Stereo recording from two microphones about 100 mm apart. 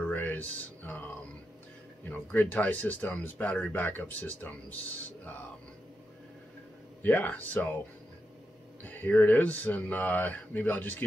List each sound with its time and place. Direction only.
0.0 s a sound: 15° left (ahead or behind)
2.0 s speech: 20° left (ahead or behind)
7.0 s speech: 15° left (ahead or behind)
8.8 s speech: 15° left (ahead or behind)